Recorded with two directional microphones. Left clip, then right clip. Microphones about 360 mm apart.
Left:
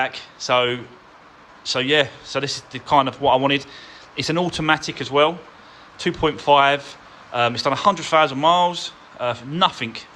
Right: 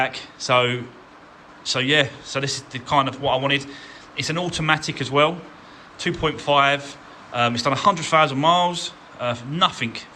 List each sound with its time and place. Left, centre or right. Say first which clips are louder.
0.0 s speech: even; centre